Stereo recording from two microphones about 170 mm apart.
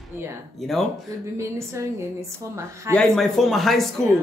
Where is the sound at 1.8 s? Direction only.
20° right (ahead or behind).